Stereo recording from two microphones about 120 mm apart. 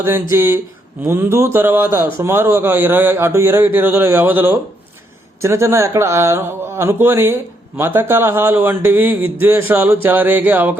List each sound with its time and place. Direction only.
0.0 s speech: 20° right (ahead or behind)